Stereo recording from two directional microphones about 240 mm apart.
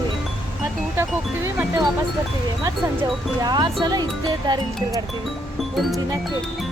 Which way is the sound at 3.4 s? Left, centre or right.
Centre.